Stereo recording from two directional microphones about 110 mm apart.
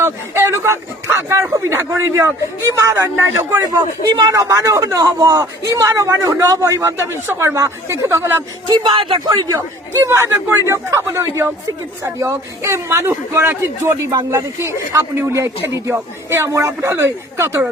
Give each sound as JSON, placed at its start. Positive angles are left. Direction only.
{"t": 0.0, "sound": "a man's voice", "side_deg": -25}
{"t": 3.6, "sound": "a man's voice", "side_deg": -35}
{"t": 8.6, "sound": "speech", "side_deg": -50}
{"t": 9.4, "sound": "a man's voice", "side_deg": -30}